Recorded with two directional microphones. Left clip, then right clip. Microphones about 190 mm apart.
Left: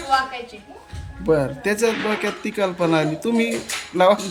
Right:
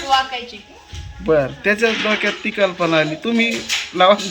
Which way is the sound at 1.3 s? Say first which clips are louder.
Right 4 dB; 10° left (ahead or behind).